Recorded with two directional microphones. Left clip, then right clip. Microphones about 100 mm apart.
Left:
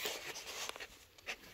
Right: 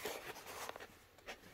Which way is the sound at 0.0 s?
30° right (ahead or behind).